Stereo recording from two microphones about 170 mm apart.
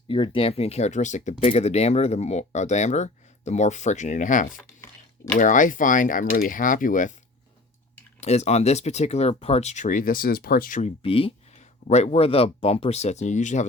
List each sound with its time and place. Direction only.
0.1 s speech: 35° left (ahead or behind); by 4.6 s 50° left (ahead or behind)
4.8 s a sound: 15° left (ahead or behind)
5.4 s speech: 50° left (ahead or behind)
8.2 s speech: 40° left (ahead or behind)